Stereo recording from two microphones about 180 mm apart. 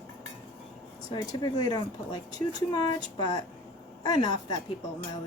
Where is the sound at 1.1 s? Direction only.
25° left (ahead or behind).